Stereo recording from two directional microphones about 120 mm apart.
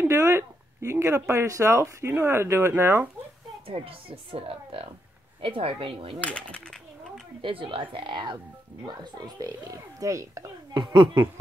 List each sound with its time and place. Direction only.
0.0 s speech: 20° right (ahead or behind)
3.6 s speech: 50° right (ahead or behind)
6.2 s speech: 10° left (ahead or behind)
7.4 s speech: 45° right (ahead or behind)